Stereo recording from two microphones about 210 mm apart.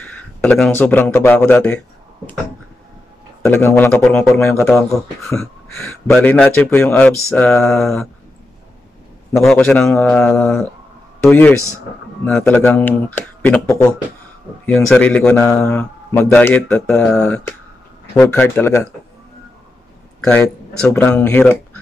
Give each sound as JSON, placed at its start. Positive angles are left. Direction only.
{"t": 0.0, "sound": "speech", "side_deg": 10}
{"t": 3.4, "sound": "a man's voice", "side_deg": 10}
{"t": 6.1, "sound": "a man's voice", "side_deg": 5}
{"t": 9.5, "sound": "a man's voice", "side_deg": 10}
{"t": 14.7, "sound": "a man's voice", "side_deg": 5}
{"t": 20.2, "sound": "a sound", "side_deg": 5}
{"t": 20.9, "sound": "a man's voice", "side_deg": 10}